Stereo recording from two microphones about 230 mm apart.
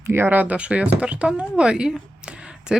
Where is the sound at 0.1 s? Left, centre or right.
Centre.